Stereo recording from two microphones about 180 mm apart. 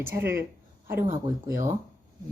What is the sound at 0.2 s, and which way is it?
Speech, 15° right (ahead or behind).